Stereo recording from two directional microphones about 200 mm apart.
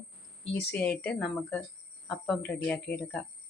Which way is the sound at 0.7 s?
5° left (ahead or behind).